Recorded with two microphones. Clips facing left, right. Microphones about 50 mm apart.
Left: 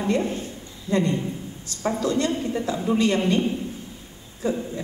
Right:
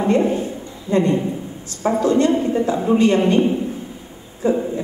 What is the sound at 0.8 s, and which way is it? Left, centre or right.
A woman's voice, right.